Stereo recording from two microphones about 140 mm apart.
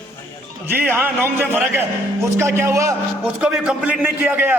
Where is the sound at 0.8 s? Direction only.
15° right (ahead or behind).